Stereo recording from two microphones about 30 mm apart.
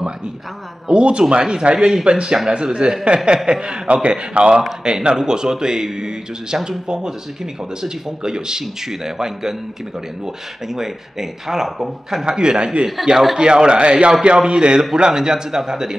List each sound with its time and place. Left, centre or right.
0.8 s a man's voice: right
7.8 s speech: right
12.3 s speech: right
13.1 s speech: centre
13.4 s a man's voice: right